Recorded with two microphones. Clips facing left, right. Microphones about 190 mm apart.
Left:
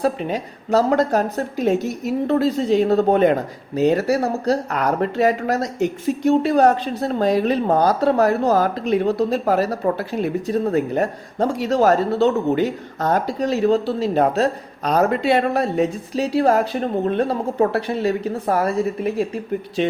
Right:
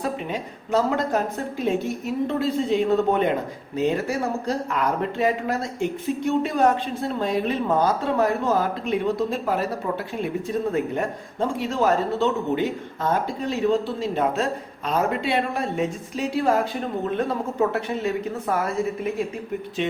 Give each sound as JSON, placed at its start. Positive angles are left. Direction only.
{"t": 0.0, "sound": "speech", "side_deg": 35}
{"t": 17.7, "sound": "speech", "side_deg": 35}